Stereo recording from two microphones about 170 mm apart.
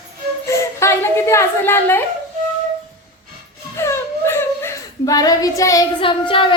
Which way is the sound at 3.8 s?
15° left (ahead or behind).